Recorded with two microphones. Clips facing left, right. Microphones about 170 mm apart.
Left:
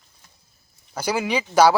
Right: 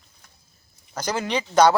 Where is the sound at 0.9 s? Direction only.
10° left (ahead or behind).